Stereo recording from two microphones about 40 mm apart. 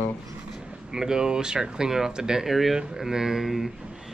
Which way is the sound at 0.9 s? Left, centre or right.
Centre.